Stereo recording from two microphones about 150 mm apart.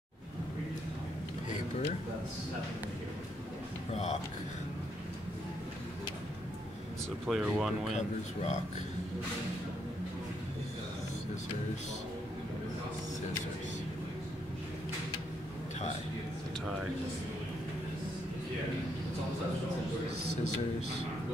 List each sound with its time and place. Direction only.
3.9 s speech: 50° left (ahead or behind)
7.2 s speech: centre (ahead or behind)
7.9 s speech: 50° left (ahead or behind)